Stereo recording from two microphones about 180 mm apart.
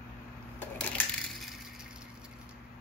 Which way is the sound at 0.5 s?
10° left (ahead or behind).